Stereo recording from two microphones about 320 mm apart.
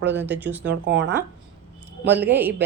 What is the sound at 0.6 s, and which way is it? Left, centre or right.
Speech, right.